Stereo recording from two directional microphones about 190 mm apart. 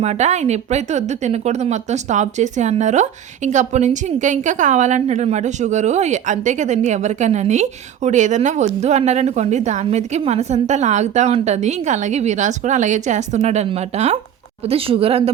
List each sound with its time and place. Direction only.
0.0 s speech: 35° right (ahead or behind)